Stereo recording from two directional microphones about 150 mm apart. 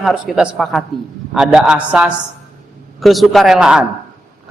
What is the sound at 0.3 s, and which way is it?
A woman's voice, centre (ahead or behind).